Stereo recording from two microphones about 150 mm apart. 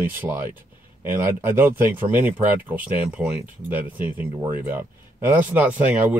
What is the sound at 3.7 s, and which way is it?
Speech, 10° right (ahead or behind).